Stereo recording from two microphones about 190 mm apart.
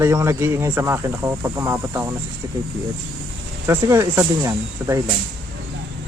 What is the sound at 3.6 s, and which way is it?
Speech, 15° right (ahead or behind).